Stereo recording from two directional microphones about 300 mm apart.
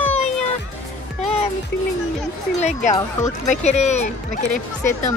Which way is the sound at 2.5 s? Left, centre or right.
Left.